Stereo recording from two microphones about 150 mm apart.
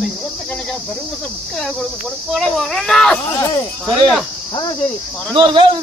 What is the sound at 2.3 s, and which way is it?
Children playing, centre (ahead or behind).